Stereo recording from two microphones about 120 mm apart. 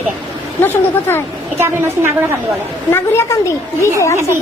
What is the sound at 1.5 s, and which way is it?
Speech, 20° right (ahead or behind).